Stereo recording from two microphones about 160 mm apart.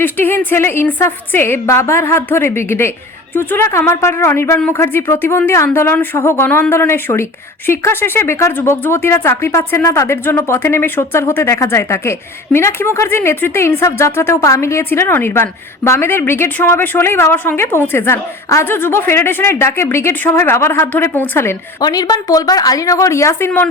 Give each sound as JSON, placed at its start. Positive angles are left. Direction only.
{"t": 0.0, "sound": "a woman's voice", "side_deg": 10}